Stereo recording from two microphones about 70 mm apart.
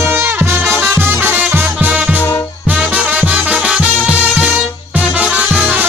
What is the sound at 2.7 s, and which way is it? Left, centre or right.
Music, centre.